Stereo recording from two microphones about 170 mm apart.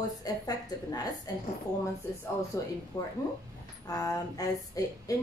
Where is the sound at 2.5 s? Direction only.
20° left (ahead or behind).